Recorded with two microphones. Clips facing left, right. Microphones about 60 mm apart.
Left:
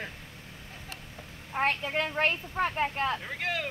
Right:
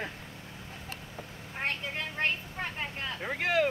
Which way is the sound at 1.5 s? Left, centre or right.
Left.